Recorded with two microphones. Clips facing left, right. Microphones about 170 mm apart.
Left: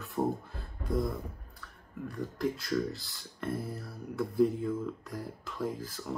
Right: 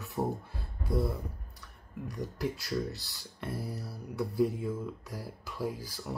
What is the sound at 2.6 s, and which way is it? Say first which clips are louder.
Speech: left 2 dB; 5° right (ahead or behind).